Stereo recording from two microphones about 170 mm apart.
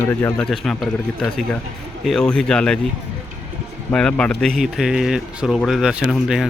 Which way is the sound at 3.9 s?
5° left (ahead or behind).